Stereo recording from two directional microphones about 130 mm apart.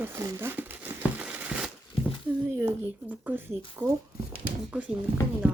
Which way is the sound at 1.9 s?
45° left (ahead or behind).